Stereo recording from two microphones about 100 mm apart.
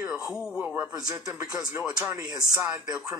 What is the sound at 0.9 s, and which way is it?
Speech, 35° right (ahead or behind).